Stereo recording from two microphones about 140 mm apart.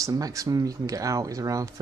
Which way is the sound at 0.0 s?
25° right (ahead or behind).